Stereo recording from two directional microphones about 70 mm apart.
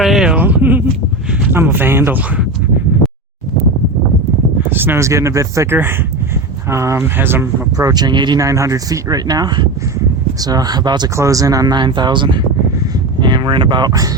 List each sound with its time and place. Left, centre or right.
0.0 s a sound: centre
0.3 s speech: right
4.7 s speech: right
4.9 s speech: right
6.7 s speech: right
7.8 s speech: right
8.4 s speech: right
10.4 s speech: right
11.2 s speech: right